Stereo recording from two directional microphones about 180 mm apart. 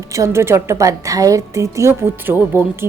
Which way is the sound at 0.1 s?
15° right (ahead or behind).